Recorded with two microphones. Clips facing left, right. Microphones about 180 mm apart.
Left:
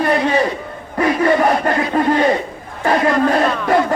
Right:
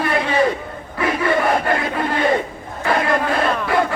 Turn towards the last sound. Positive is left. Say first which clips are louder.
# left 4 dB
turn(degrees=45)  # may be behind; listen again after turning